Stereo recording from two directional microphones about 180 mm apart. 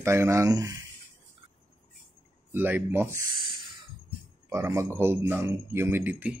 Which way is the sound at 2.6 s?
10° right (ahead or behind).